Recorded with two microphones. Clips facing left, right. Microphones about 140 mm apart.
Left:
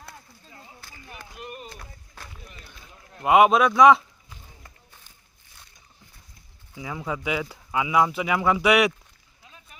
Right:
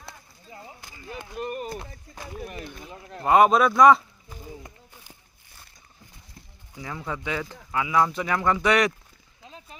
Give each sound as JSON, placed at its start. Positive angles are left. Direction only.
{"t": 0.5, "sound": "a sound", "side_deg": -15}
{"t": 1.4, "sound": "speech", "side_deg": -45}
{"t": 2.4, "sound": "speech", "side_deg": -65}
{"t": 3.2, "sound": "speech", "side_deg": 5}
{"t": 6.7, "sound": "speech", "side_deg": 10}
{"t": 9.5, "sound": "run", "side_deg": -30}